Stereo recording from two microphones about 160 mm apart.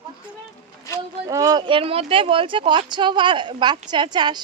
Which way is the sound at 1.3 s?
20° right (ahead or behind).